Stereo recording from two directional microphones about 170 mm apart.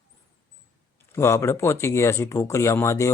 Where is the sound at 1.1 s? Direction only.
15° left (ahead or behind).